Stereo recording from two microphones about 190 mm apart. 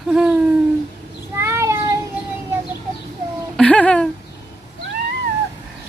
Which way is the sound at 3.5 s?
5° left (ahead or behind).